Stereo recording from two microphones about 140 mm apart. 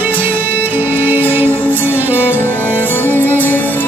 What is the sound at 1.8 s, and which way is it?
Music, 10° right (ahead or behind).